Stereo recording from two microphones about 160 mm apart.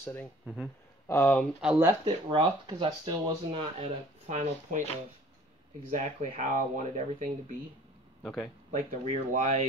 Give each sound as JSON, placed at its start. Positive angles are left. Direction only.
{"t": 0.0, "sound": "speech", "side_deg": 15}
{"t": 1.6, "sound": "speech", "side_deg": -5}
{"t": 1.9, "sound": "speech", "side_deg": -25}
{"t": 3.8, "sound": "speech", "side_deg": -45}
{"t": 5.9, "sound": "speech", "side_deg": -55}
{"t": 8.2, "sound": "speech", "side_deg": 5}
{"t": 8.7, "sound": "speech", "side_deg": -50}